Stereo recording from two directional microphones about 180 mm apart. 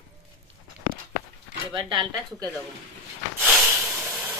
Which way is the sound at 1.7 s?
25° right (ahead or behind).